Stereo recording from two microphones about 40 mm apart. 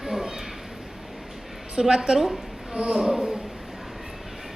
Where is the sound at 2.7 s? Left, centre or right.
Right.